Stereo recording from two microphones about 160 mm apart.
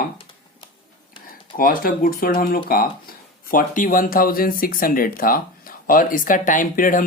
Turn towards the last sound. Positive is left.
turn(degrees=60)  # may be behind; listen again after turning